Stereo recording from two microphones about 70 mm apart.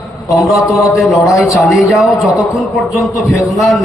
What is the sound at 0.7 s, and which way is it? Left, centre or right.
Speech, left.